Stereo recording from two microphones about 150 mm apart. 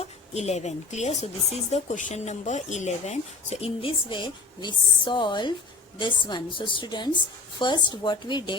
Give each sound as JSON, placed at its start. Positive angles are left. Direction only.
{"t": 0.0, "sound": "a woman's voice", "side_deg": 45}